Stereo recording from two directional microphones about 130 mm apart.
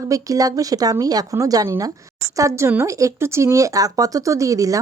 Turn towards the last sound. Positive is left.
turn(degrees=-25)  # may be behind; listen again after turning